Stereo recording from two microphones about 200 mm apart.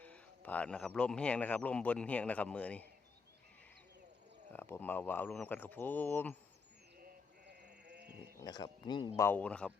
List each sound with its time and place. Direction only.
0.0 s speech: 5° left (ahead or behind)
4.5 s speech: 10° left (ahead or behind)
7.0 s sheep: 55° right (ahead or behind)
8.4 s speech: 20° left (ahead or behind)